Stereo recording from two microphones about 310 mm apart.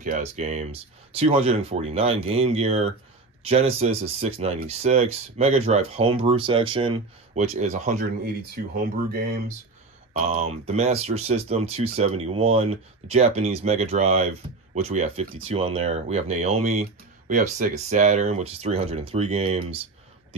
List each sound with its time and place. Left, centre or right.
0.0 s speech: right
10.2 s speech: right